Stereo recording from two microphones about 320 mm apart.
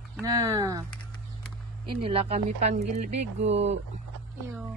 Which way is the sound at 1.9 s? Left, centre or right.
Centre.